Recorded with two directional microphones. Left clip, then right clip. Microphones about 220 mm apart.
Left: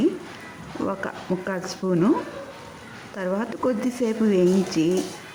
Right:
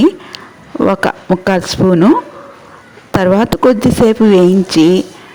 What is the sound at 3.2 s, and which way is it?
Speech, 40° right (ahead or behind).